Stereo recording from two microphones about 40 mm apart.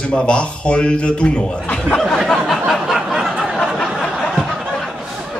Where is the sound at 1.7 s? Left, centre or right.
Centre.